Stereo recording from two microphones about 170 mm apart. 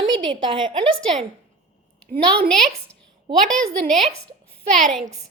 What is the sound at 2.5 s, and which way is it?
A woman's voice, centre (ahead or behind).